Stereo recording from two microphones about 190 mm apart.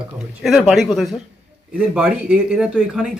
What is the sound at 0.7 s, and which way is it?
Speech, centre (ahead or behind).